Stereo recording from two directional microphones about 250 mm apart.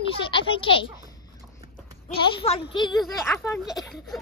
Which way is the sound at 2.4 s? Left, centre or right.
Left.